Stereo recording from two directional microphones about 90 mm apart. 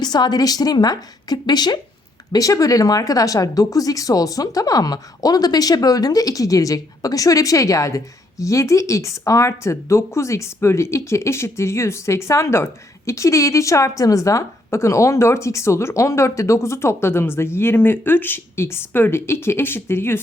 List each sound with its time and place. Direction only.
0.0 s a woman's voice: 50° left (ahead or behind)
2.3 s speech: 40° left (ahead or behind)